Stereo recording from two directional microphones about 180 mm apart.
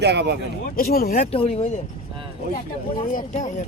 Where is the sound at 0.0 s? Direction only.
70° right (ahead or behind).